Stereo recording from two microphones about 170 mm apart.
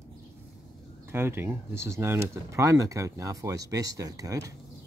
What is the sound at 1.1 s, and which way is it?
Speech, 15° right (ahead or behind).